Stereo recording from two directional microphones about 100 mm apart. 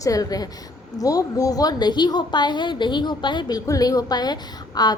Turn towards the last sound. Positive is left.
turn(degrees=45)  # may be behind; listen again after turning